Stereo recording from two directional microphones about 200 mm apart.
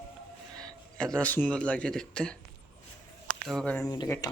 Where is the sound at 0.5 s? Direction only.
5° left (ahead or behind).